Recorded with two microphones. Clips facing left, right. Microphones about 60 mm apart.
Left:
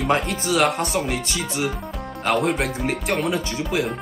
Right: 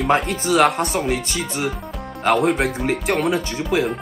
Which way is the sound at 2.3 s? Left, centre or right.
Centre.